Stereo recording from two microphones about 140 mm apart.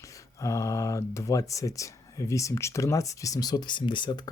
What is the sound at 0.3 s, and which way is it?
Speech, 25° left (ahead or behind).